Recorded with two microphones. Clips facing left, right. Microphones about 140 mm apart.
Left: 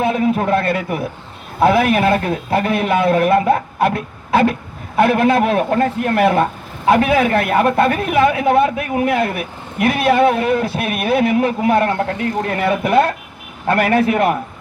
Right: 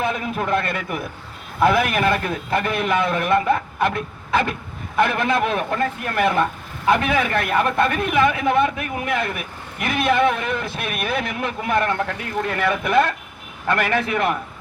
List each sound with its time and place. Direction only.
0.0 s a man's voice: 35° left (ahead or behind)